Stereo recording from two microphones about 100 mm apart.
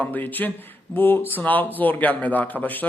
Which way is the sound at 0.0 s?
15° left (ahead or behind).